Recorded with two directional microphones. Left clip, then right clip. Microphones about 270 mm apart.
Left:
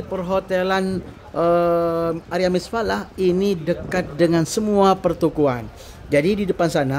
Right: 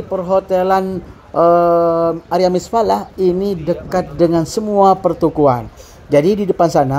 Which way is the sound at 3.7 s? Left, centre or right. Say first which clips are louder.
Right 5 dB; centre.